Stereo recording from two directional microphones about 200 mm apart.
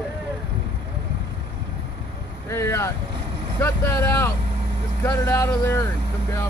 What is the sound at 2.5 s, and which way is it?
Speech, 15° left (ahead or behind).